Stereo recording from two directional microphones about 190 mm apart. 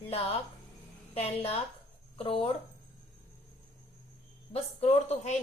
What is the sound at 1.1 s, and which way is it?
A woman's voice, 30° left (ahead or behind).